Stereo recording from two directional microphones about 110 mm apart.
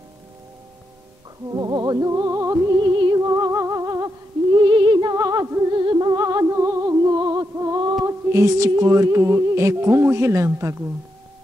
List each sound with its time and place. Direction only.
1.5 s music: 40° right (ahead or behind)
2.8 s music: 45° right (ahead or behind)
3.3 s humming: 30° right (ahead or behind)
4.6 s a sound: 45° right (ahead or behind)
5.1 s music: 30° right (ahead or behind)
5.8 s music: 45° right (ahead or behind); by 7.0 s 30° right (ahead or behind)
7.1 s music: 40° right (ahead or behind)